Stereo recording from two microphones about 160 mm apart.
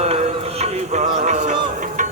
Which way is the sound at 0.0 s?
40° right (ahead or behind).